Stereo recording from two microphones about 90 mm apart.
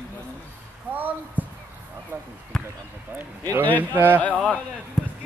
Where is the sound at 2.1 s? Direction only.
25° right (ahead or behind).